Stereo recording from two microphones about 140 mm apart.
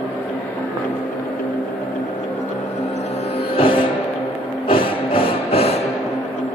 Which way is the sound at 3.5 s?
40° left (ahead or behind).